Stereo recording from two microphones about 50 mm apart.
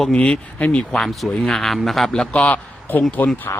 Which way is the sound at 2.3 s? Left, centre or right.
Left.